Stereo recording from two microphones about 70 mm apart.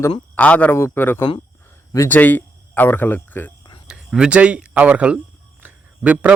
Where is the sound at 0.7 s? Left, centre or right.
Left.